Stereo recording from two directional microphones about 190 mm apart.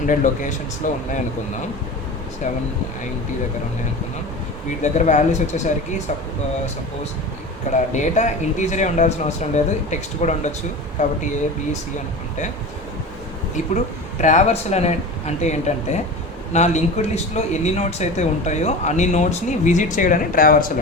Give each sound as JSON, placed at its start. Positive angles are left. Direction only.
{"t": 0.0, "sound": "speech", "side_deg": 40}
{"t": 4.8, "sound": "speech", "side_deg": 40}
{"t": 7.7, "sound": "speech", "side_deg": 40}
{"t": 14.2, "sound": "speech", "side_deg": 40}